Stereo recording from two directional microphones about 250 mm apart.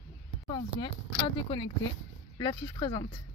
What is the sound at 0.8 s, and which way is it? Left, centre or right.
Speech, centre.